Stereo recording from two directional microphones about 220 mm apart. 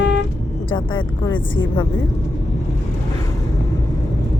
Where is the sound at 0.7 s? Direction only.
20° left (ahead or behind).